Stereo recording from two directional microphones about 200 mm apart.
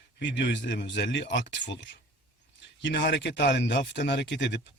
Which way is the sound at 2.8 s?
60° left (ahead or behind).